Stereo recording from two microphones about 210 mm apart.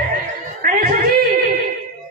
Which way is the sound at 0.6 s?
45° right (ahead or behind).